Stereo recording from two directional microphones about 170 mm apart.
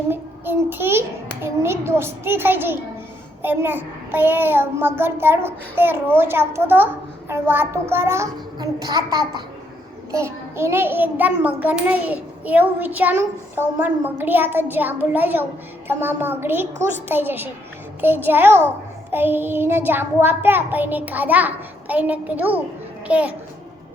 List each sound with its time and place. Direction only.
0.1 s a child's voice: 10° right (ahead or behind)